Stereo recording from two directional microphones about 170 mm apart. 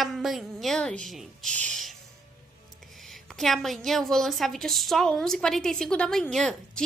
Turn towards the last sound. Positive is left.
turn(degrees=5)  # may be behind; listen again after turning